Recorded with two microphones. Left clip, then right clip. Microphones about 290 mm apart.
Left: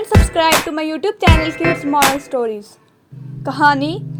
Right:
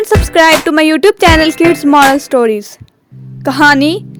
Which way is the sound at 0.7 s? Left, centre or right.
Right.